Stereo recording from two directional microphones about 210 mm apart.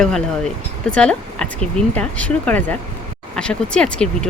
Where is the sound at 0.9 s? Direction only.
5° left (ahead or behind).